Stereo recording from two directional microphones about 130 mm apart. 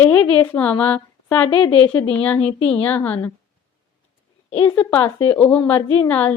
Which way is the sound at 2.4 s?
50° left (ahead or behind).